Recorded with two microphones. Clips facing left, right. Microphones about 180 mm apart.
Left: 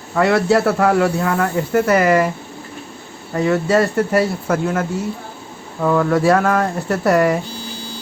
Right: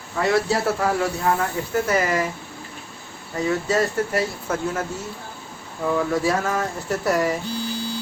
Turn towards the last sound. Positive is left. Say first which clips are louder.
# left 6 dB
turn(degrees=65)  # may be behind; listen again after turning